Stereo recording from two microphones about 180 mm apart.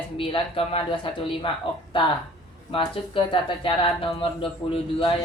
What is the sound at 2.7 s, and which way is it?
Speech, 30° left (ahead or behind).